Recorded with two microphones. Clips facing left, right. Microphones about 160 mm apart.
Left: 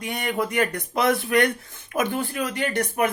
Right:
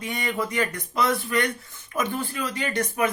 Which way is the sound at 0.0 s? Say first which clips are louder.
Left 2 dB; 55° left (ahead or behind).